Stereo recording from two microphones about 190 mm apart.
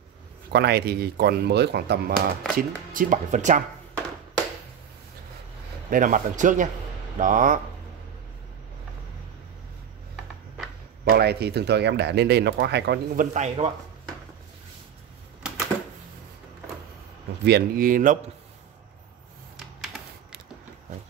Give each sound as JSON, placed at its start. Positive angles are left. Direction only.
{"t": 0.5, "sound": "speech", "side_deg": -60}
{"t": 2.5, "sound": "speech", "side_deg": -45}
{"t": 5.9, "sound": "speech", "side_deg": -45}
{"t": 11.1, "sound": "speech", "side_deg": -55}
{"t": 17.5, "sound": "speech", "side_deg": -55}